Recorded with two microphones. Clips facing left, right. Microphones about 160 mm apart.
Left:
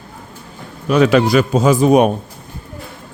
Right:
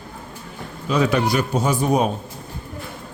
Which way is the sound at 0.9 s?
85° left.